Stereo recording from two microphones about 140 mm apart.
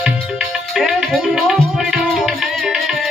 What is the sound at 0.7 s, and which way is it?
Music, centre (ahead or behind).